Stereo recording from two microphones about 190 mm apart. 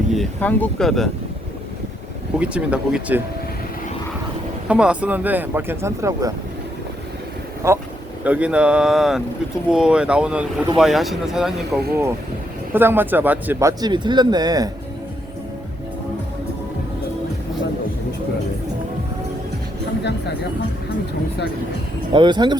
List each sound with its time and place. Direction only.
0.1 s speech: 5° left (ahead or behind)
2.4 s speech: 5° right (ahead or behind)
4.7 s speech: 5° right (ahead or behind)
7.6 s speech: 15° right (ahead or behind)
22.1 s speech: 25° right (ahead or behind)